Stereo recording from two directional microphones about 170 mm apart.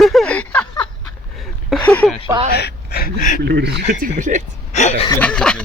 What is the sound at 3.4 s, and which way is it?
Speech, 80° right.